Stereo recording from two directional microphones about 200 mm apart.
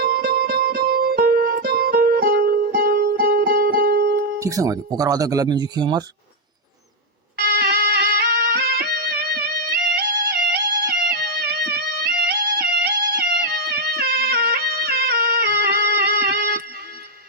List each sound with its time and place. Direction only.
0.0 s music: 50° right (ahead or behind)
4.4 s speech: 15° right (ahead or behind)
7.3 s music: 50° right (ahead or behind)